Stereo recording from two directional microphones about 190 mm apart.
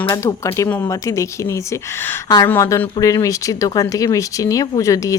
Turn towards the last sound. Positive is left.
turn(degrees=15)  # may be behind; listen again after turning